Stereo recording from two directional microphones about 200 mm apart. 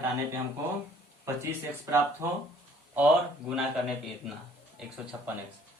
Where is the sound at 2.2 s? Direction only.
15° right (ahead or behind).